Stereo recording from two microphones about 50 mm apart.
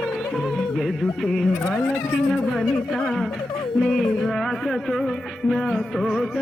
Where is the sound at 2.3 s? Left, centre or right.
Centre.